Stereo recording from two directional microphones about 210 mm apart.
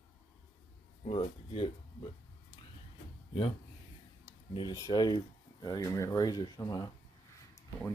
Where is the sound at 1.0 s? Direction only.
25° left (ahead or behind).